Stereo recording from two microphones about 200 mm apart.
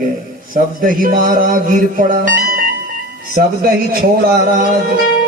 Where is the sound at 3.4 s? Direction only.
45° right (ahead or behind).